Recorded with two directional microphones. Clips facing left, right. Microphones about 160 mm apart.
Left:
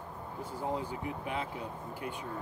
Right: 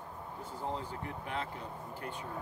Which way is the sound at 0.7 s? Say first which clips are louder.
Left 4 dB; 10° left (ahead or behind).